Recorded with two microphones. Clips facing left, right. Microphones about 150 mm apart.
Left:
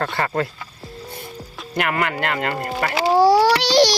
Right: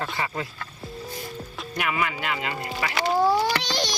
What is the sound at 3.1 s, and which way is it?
Speech, 80° left.